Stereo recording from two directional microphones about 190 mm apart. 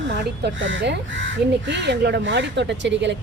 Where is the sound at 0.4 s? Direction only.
75° right (ahead or behind).